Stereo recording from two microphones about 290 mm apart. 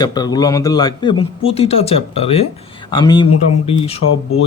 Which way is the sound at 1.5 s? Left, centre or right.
Left.